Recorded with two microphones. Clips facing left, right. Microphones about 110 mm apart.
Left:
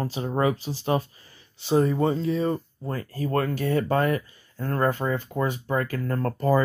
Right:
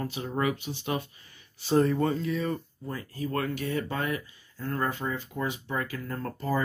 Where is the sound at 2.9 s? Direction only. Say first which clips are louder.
Left 5 dB; 45° left (ahead or behind).